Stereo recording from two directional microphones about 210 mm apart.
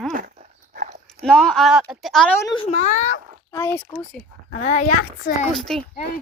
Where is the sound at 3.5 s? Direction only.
10° left (ahead or behind).